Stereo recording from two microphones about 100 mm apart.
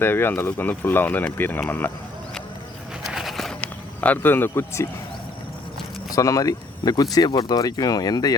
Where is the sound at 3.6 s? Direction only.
15° left (ahead or behind).